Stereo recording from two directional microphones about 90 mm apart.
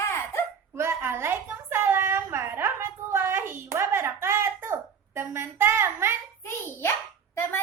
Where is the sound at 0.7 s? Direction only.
30° right (ahead or behind).